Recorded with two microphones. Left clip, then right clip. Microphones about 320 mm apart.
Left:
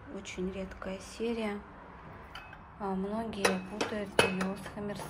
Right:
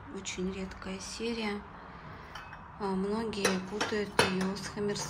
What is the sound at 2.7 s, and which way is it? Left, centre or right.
Speech, centre.